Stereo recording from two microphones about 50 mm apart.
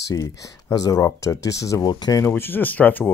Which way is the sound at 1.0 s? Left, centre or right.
Left.